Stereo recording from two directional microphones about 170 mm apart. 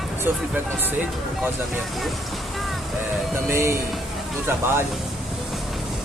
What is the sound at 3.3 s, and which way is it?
Speech, 15° right (ahead or behind).